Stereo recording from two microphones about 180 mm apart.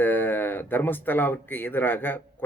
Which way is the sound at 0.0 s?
10° left (ahead or behind).